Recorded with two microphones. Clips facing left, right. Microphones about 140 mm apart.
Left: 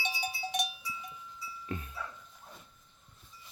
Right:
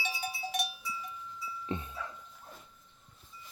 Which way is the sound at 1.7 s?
25° right (ahead or behind).